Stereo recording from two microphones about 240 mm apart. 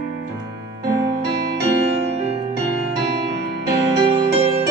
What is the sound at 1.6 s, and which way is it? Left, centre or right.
Music, right.